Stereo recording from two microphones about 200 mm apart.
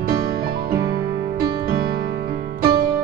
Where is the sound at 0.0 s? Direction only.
50° right (ahead or behind).